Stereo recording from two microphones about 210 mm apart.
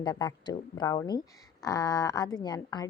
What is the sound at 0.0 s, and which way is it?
A woman's voice, 20° left (ahead or behind).